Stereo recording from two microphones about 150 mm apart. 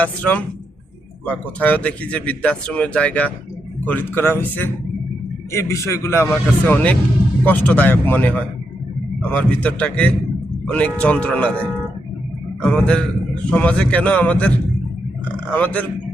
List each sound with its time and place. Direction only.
0.0 s a man's voice: 10° left (ahead or behind)
15.5 s speech: 10° left (ahead or behind)